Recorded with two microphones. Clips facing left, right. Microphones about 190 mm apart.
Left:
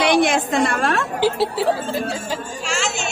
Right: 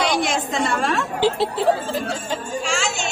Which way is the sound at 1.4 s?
5° left (ahead or behind).